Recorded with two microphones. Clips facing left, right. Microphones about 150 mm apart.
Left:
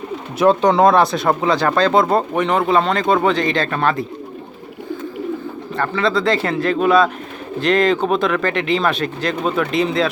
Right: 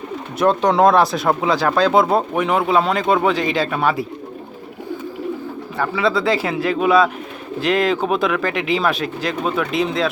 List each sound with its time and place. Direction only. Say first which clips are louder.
0.3 s speech: left 2 dB; centre (ahead or behind)
5.7 s speech: even; 5° right (ahead or behind)